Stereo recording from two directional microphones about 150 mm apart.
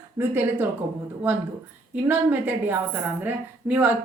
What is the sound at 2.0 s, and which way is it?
A woman's voice, 10° right (ahead or behind).